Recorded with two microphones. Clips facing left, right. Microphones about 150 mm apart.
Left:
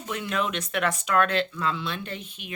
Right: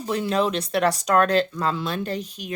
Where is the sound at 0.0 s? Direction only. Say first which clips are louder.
Right 6 dB; 35° right (ahead or behind).